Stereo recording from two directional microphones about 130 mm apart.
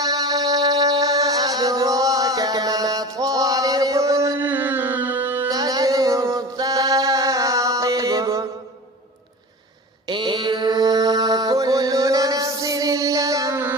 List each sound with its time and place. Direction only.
0.0 s music: 30° right (ahead or behind)
5.5 s music: 30° right (ahead or behind)
10.1 s mantra: 35° right (ahead or behind); by 13.7 s 20° right (ahead or behind)